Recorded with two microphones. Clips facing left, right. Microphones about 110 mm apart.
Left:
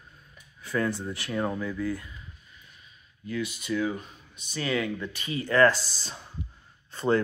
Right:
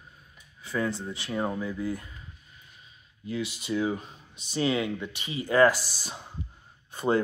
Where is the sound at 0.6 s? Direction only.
Centre (ahead or behind).